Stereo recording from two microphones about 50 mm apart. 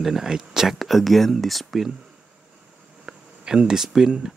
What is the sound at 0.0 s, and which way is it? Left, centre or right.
Speech, centre.